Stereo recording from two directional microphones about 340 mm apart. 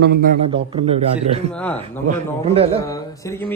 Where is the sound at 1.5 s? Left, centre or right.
Centre.